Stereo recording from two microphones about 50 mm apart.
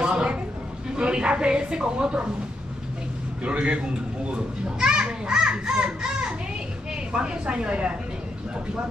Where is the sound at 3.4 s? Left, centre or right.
Right.